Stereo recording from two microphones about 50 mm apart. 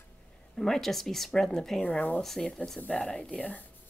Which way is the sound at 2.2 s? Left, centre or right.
Centre.